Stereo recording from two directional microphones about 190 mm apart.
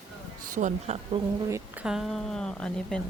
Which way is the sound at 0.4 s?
40° right (ahead or behind).